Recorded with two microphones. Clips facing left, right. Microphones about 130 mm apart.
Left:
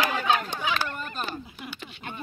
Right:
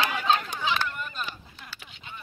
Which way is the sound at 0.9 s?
40° left (ahead or behind).